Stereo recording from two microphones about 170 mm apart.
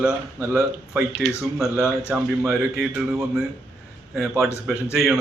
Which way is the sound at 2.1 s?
5° right (ahead or behind).